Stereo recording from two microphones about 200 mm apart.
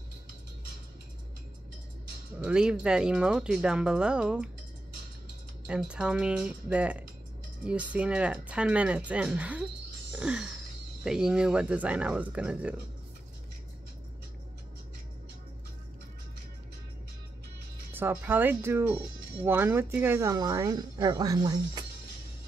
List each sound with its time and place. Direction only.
2.4 s speech: 5° right (ahead or behind)
5.7 s speech: 5° right (ahead or behind)
10.1 s a sound: 5° right (ahead or behind)
11.1 s speech: 5° right (ahead or behind)
17.9 s speech: 10° right (ahead or behind)